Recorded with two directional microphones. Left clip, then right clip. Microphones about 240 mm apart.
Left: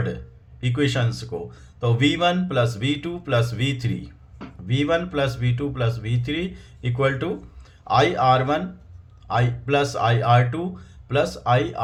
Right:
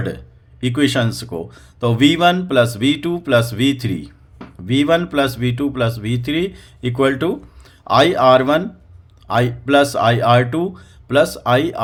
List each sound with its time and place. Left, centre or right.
0.6 s speech: right